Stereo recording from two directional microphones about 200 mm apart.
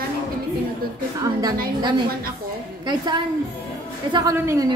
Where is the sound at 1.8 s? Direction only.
20° right (ahead or behind).